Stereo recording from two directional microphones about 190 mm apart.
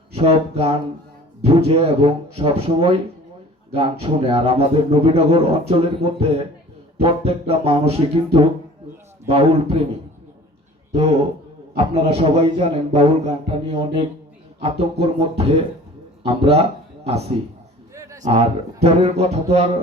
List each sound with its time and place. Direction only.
0.1 s speech: 30° right (ahead or behind)
10.9 s speech: 30° right (ahead or behind)
17.9 s a sound: 15° right (ahead or behind)
18.2 s speech: 30° right (ahead or behind)